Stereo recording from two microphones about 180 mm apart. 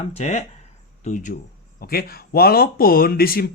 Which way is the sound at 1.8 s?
55° left (ahead or behind).